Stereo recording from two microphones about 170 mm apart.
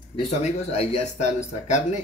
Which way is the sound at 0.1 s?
40° left (ahead or behind).